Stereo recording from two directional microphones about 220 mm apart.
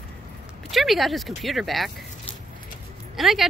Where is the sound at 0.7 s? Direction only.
Centre (ahead or behind).